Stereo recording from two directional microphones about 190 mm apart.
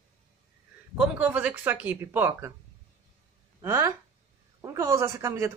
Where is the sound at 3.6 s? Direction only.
15° right (ahead or behind).